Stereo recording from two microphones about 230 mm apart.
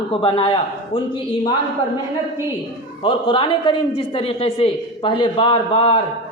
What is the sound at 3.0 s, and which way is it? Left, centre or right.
A man's voice, left.